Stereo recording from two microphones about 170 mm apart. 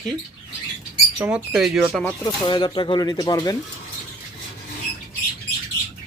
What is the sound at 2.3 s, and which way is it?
Speech, 25° left (ahead or behind).